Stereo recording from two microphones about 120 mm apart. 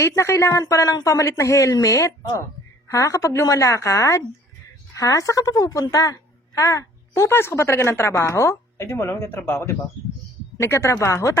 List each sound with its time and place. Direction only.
0.0 s a woman's voice: 20° left (ahead or behind)